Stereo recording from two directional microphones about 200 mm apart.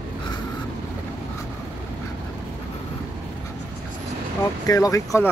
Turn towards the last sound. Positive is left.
turn(degrees=15)  # may be behind; listen again after turning